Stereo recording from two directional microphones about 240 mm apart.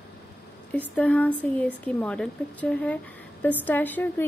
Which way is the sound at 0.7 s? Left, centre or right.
Centre.